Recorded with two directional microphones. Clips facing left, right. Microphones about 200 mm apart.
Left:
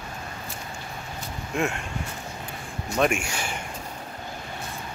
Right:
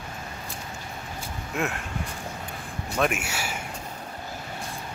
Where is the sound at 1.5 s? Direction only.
Centre (ahead or behind).